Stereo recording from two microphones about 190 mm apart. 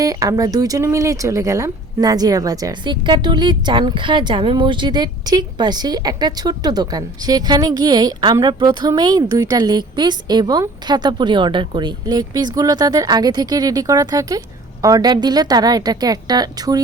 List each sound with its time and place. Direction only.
0.0 s speech: 20° right (ahead or behind)